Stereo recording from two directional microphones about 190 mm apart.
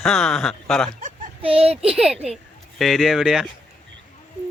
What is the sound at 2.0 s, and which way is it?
Speech, 5° right (ahead or behind).